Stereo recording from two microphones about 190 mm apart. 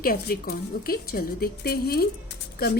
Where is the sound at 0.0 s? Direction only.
50° left (ahead or behind).